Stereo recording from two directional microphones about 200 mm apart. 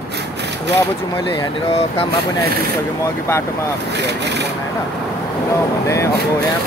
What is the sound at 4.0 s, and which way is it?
Vehicle, 60° right (ahead or behind).